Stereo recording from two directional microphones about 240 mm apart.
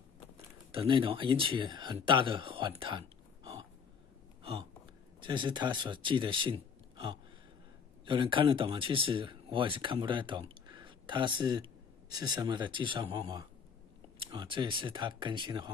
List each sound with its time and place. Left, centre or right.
0.7 s speech: right
4.4 s hiccup: right
5.2 s speech: centre